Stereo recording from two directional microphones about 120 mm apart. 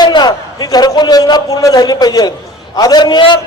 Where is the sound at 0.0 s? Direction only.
35° left (ahead or behind).